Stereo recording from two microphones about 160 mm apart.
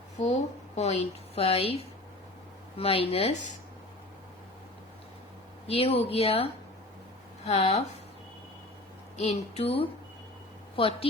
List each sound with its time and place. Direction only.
0.2 s a woman's voice: 45° left (ahead or behind)
5.6 s a woman's voice: 40° left (ahead or behind)
9.1 s a woman's voice: 40° left (ahead or behind)